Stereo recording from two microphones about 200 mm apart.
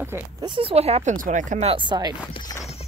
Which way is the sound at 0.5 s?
25° right (ahead or behind).